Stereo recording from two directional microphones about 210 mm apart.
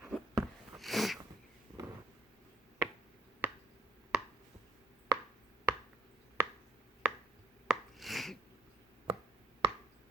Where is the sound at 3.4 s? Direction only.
10° right (ahead or behind).